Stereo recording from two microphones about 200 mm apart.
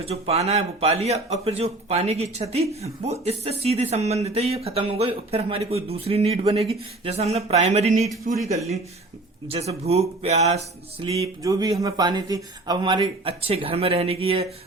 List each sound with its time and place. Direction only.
0.0 s speech: 30° right (ahead or behind)
9.5 s speech: 30° right (ahead or behind)
11.4 s speech: 20° right (ahead or behind)